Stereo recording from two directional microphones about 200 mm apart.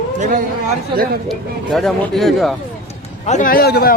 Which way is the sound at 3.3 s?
40° left (ahead or behind).